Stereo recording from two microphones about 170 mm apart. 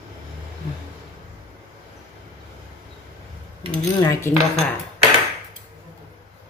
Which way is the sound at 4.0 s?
20° left (ahead or behind).